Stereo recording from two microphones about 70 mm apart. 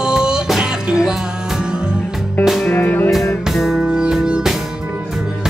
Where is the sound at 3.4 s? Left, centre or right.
Centre.